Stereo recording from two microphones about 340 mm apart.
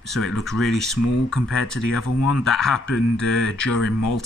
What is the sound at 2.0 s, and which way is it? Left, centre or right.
Speech, left.